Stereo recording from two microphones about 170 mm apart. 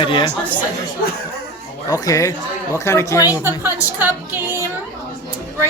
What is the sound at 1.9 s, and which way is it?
Speech, 20° left (ahead or behind).